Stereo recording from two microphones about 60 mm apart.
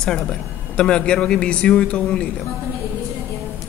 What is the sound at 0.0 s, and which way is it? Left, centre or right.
Speech, centre.